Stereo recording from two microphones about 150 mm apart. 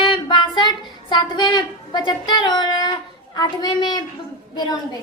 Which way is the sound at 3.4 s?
30° left (ahead or behind).